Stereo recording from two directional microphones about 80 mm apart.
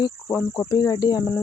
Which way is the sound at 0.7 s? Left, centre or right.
Left.